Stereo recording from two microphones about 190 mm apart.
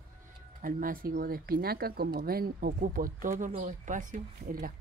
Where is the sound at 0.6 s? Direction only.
45° right (ahead or behind).